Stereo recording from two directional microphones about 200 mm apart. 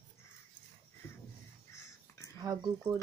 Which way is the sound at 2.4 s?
20° right (ahead or behind).